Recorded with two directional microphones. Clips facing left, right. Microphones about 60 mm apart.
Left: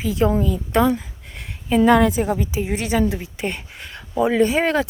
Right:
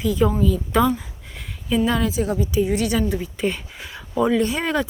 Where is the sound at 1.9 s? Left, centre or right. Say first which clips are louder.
Left 11 dB; left.